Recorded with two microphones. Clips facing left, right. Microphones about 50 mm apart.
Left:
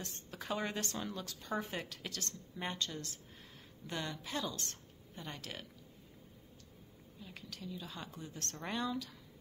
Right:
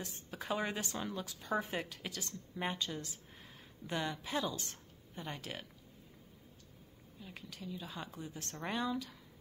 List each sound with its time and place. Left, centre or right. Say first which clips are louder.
0.0 s speech: right 2 dB; centre
7.2 s speech: right 1 dB; centre